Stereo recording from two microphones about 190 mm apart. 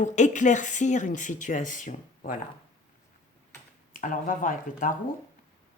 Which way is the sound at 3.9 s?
45° left (ahead or behind).